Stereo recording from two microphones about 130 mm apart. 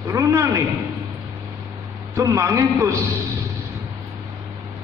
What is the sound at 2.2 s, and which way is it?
A man's voice, 25° right (ahead or behind).